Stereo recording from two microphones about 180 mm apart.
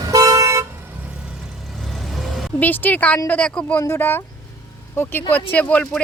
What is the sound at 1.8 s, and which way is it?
Speech, centre (ahead or behind).